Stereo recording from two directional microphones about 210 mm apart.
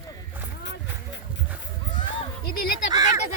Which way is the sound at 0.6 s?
55° left (ahead or behind).